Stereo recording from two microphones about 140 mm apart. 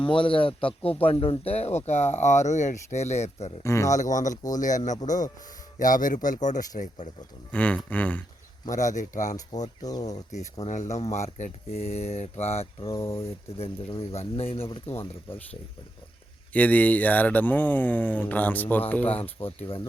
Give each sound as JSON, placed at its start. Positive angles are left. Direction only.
{"t": 0.0, "sound": "speech", "side_deg": 35}
{"t": 3.6, "sound": "speech", "side_deg": 20}
{"t": 3.9, "sound": "speech", "side_deg": 60}
{"t": 7.5, "sound": "speech", "side_deg": 10}
{"t": 8.7, "sound": "speech", "side_deg": 60}
{"t": 16.5, "sound": "speech", "side_deg": 10}
{"t": 19.4, "sound": "speech", "side_deg": 40}